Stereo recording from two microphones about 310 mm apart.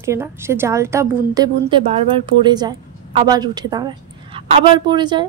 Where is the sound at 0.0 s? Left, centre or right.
Centre.